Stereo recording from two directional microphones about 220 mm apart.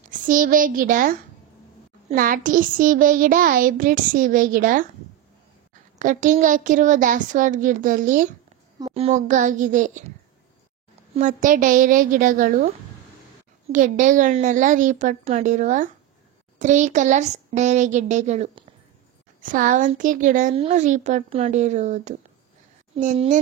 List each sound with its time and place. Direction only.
0.3 s speech: 40° right (ahead or behind)
5.9 s speech: 35° right (ahead or behind)
8.7 s speech: 20° right (ahead or behind)
11.4 s speech: 35° right (ahead or behind)